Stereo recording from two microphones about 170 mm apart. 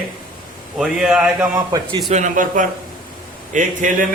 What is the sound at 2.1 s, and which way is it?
Speech, 45° right (ahead or behind).